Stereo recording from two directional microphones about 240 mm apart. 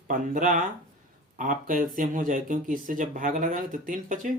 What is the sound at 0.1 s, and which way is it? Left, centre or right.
Speech, right.